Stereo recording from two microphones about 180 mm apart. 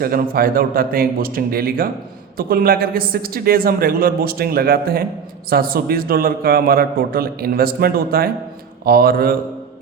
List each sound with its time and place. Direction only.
0.0 s a man's voice: 55° right (ahead or behind)